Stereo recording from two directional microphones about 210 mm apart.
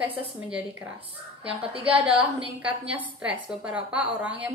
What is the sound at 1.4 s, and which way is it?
Speech, 25° right (ahead or behind).